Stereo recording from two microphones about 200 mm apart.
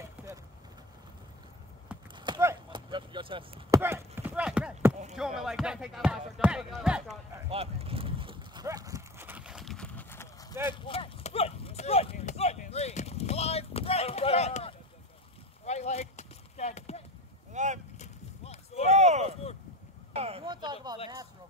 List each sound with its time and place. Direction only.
2.1 s chop: 20° right (ahead or behind)
3.8 s chopping: 10° right (ahead or behind)
5.1 s speech: centre (ahead or behind)
7.4 s livestock: 30° right (ahead or behind); by 10.2 s 10° left (ahead or behind)
10.6 s clip-clop: 25° left (ahead or behind)
17.5 s vehicle: 35° right (ahead or behind)
17.9 s clip-clop: 35° left (ahead or behind)
18.9 s a sound: 35° right (ahead or behind)